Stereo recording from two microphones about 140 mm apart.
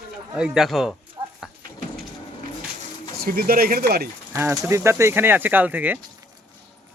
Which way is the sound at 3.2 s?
90° right.